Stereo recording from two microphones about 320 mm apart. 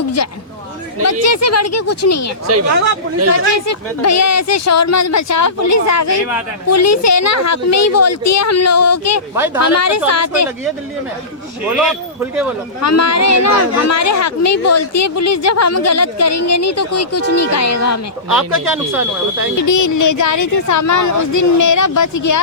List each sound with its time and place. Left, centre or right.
1.0 s speech: left
3.2 s speech: right
3.7 s speech: left
11.8 s speech: centre
12.8 s speech: left
18.3 s speech: centre
19.5 s speech: left